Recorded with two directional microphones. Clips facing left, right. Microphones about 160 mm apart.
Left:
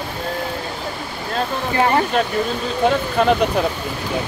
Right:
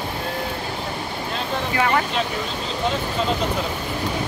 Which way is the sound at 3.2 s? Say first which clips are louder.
Left 8 dB; 60° left (ahead or behind).